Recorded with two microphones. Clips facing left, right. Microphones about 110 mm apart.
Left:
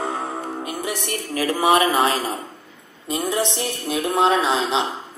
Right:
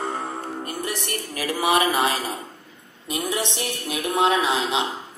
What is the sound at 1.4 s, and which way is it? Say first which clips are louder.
Speech: left 3 dB; 30° left (ahead or behind).